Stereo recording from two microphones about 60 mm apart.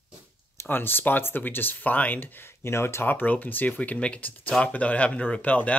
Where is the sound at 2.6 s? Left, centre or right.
Left.